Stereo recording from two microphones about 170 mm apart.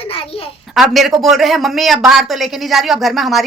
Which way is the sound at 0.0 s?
35° left (ahead or behind).